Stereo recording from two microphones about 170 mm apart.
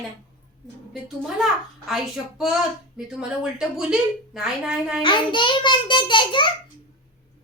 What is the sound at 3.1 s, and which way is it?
A woman's voice, 5° right (ahead or behind).